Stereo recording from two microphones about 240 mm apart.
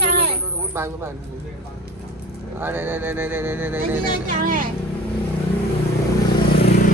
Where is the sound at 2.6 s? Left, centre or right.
Centre.